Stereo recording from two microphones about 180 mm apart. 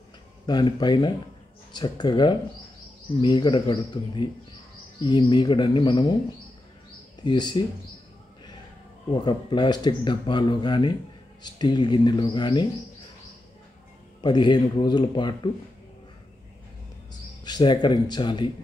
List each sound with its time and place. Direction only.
0.5 s speech: 25° left (ahead or behind)
7.2 s speech: 25° left (ahead or behind)
9.1 s speech: 25° left (ahead or behind)
14.2 s speech: 25° left (ahead or behind)
17.5 s speech: 25° left (ahead or behind)